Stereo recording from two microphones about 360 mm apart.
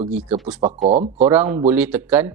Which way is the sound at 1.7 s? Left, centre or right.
Centre.